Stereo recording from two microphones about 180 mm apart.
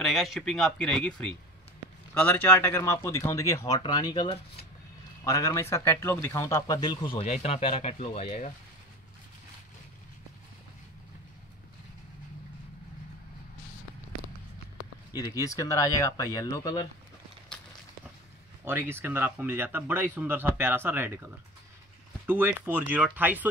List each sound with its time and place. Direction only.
0.0 s speech: centre (ahead or behind); by 4.6 s 30° left (ahead or behind)
5.2 s speech: 20° left (ahead or behind); by 8.5 s 35° left (ahead or behind)
15.1 s speech: 20° left (ahead or behind)
18.7 s speech: 10° right (ahead or behind)